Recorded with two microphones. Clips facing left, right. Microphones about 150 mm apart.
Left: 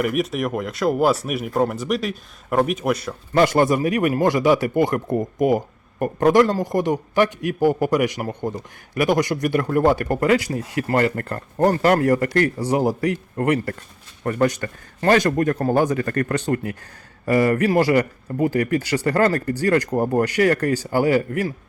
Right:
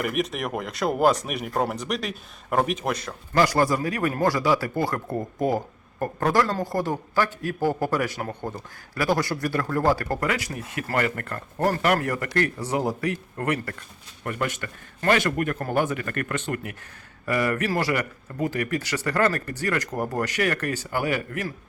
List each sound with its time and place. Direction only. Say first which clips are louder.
0.0 s speech: left 5 dB; centre (ahead or behind)
3.3 s a man's voice: left 4 dB; 25° left (ahead or behind)
14.3 s a man's voice: left 8 dB; 40° left (ahead or behind)